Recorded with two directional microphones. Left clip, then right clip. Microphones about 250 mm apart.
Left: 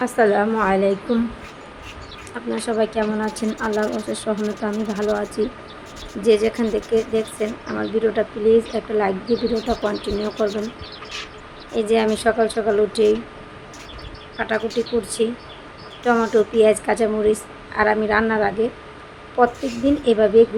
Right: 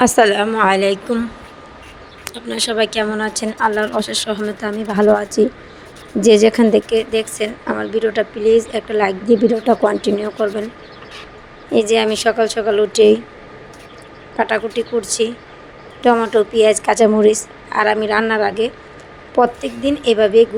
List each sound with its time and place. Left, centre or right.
0.0 s speech: right
2.6 s a woman's voice: right
11.7 s a woman's voice: right
14.3 s a woman's voice: right